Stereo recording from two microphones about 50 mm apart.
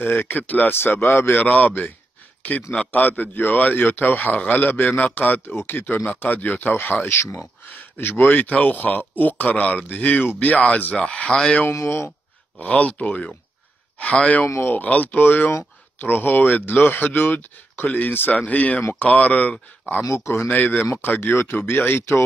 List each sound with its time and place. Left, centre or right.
0.0 s speech: left
0.7 s speech: left
7.1 s speech: left
7.7 s speech: left
11.0 s speech: left
11.7 s speech: left
12.5 s speech: left
14.4 s speech: left
14.9 s speech: left
20.1 s speech: left
20.4 s speech: left
21.2 s speech: left